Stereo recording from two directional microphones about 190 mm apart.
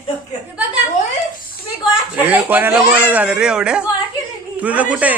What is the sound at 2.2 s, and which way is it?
Speech, 10° right (ahead or behind).